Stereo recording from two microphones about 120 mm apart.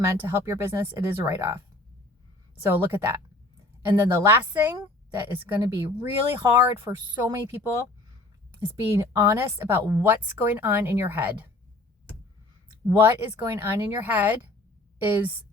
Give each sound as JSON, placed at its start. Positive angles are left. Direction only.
{"t": 0.2, "sound": "speech", "side_deg": -20}
{"t": 2.6, "sound": "a woman's voice", "side_deg": -15}
{"t": 13.0, "sound": "a woman's voice", "side_deg": -20}